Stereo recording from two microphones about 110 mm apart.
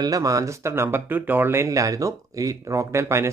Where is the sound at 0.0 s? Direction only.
30° right (ahead or behind).